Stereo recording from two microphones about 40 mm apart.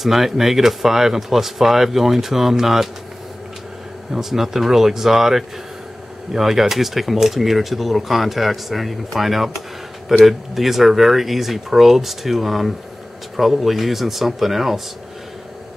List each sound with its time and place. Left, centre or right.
0.0 s speech: centre
4.1 s speech: centre